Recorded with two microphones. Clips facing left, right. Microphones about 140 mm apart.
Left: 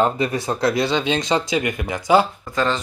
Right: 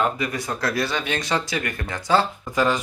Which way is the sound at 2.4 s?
10° right (ahead or behind).